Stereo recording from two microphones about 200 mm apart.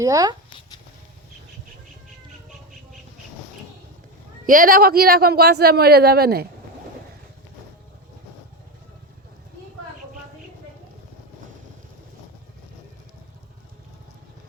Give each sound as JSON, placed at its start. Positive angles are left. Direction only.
{"t": 0.0, "sound": "speech", "side_deg": -20}
{"t": 4.4, "sound": "speech", "side_deg": -45}